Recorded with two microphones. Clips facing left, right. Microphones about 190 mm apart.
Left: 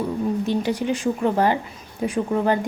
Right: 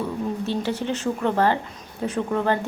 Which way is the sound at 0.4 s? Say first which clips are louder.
Left 3 dB; 15° left (ahead or behind).